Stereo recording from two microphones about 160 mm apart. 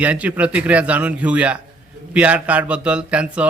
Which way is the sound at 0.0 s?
10° right (ahead or behind).